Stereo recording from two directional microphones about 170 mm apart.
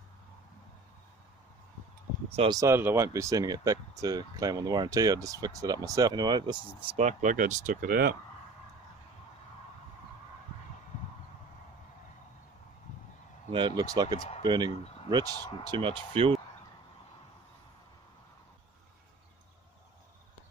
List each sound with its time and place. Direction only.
2.5 s speech: 15° right (ahead or behind)
7.0 s speech: 45° right (ahead or behind); by 8.2 s 60° right (ahead or behind)
13.5 s speech: 25° right (ahead or behind)
14.7 s speech: 35° left (ahead or behind)
15.7 s speech: 30° right (ahead or behind)